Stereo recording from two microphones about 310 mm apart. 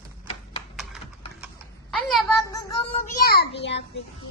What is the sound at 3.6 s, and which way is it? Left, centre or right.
Speech, left.